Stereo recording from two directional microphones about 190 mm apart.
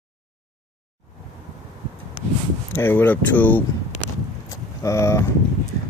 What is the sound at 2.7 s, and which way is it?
Speech, 10° left (ahead or behind).